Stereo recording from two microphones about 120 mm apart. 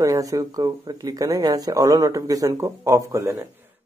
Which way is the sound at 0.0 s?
30° right (ahead or behind).